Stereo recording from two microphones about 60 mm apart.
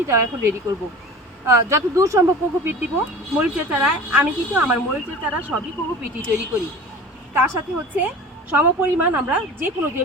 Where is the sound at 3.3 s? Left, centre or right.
Right.